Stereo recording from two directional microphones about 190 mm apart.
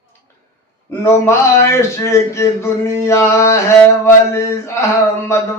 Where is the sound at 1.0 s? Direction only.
15° left (ahead or behind).